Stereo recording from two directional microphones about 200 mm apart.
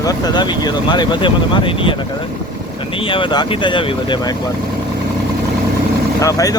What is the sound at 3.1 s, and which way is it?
Speech, 25° left (ahead or behind).